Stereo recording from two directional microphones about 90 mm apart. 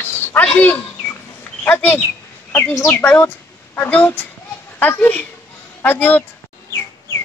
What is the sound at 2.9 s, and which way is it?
A child's voice, 20° left (ahead or behind).